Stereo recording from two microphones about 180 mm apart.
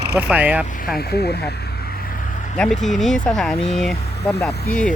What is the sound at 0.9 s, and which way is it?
Speech, 60° left (ahead or behind).